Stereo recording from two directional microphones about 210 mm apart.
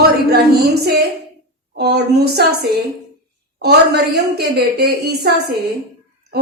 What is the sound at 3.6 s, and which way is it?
A woman's voice, 50° right (ahead or behind).